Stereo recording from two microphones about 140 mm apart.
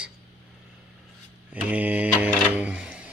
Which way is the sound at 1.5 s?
10° right (ahead or behind).